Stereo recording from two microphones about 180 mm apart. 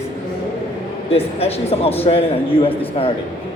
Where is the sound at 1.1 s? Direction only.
35° left (ahead or behind).